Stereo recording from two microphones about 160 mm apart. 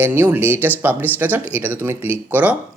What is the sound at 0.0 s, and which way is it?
Speech, 15° right (ahead or behind).